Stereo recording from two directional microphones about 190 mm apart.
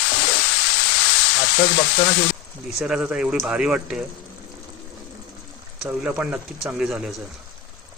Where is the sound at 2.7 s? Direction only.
5° right (ahead or behind).